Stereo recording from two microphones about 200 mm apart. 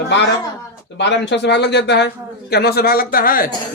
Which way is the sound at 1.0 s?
60° left (ahead or behind).